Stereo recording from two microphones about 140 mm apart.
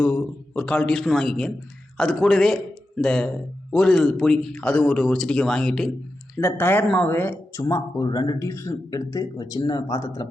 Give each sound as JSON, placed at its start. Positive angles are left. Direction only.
{"t": 0.0, "sound": "a man's voice", "side_deg": 10}
{"t": 6.3, "sound": "speech", "side_deg": 15}